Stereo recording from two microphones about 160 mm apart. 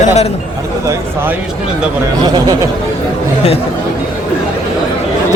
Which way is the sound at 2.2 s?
25° right (ahead or behind).